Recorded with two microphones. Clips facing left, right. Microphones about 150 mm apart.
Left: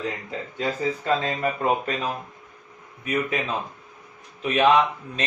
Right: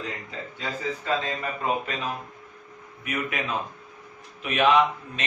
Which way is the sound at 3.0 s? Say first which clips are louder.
Left 5 dB; 30° left (ahead or behind).